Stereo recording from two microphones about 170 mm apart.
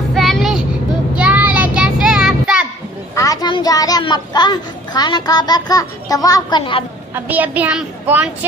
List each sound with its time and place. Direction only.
0.1 s vehicle: centre (ahead or behind)
1.1 s child singing: 10° right (ahead or behind)
3.2 s a child's voice: 20° left (ahead or behind)
7.2 s a child's voice: 10° right (ahead or behind)